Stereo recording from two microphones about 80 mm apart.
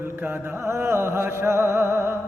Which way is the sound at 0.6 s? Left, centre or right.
Right.